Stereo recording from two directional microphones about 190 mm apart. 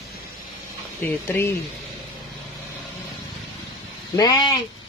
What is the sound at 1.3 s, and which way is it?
Speech, 15° left (ahead or behind).